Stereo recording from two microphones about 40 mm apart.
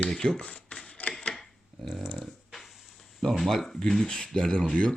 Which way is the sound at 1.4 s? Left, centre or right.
Centre.